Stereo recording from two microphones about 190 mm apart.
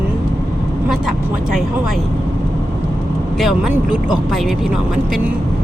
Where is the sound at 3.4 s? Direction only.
Centre (ahead or behind).